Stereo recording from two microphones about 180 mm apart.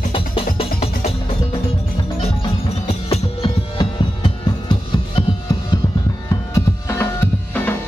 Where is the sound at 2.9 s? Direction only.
35° left (ahead or behind).